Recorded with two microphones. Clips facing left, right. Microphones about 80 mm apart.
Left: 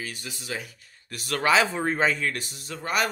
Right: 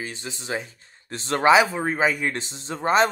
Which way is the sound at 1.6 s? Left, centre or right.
Centre.